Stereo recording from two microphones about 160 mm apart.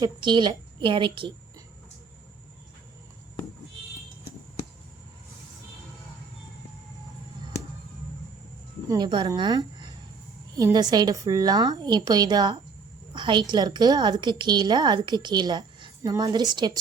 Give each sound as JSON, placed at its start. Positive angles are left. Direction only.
{"t": 0.0, "sound": "a woman's voice", "side_deg": -30}
{"t": 8.9, "sound": "a woman's voice", "side_deg": -25}